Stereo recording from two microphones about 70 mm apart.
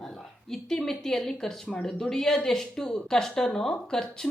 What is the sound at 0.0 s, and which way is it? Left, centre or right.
A woman's voice, centre.